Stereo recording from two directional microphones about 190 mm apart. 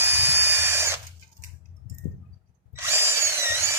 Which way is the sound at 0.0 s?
15° right (ahead or behind).